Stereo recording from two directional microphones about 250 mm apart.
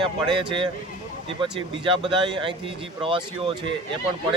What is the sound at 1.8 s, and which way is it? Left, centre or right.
Speech, centre.